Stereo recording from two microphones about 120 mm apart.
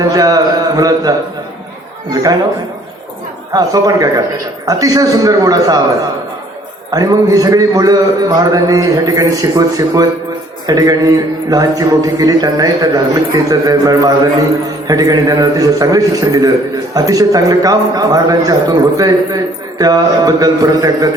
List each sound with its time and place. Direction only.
0.1 s a man's voice: 30° right (ahead or behind)
3.5 s a man's voice: 30° right (ahead or behind)
6.9 s a man's voice: 30° right (ahead or behind)